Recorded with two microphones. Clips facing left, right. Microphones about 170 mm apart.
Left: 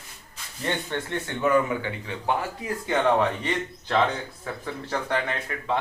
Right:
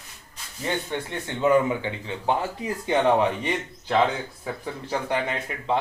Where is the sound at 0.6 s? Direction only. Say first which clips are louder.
Right 1 dB; 10° right (ahead or behind).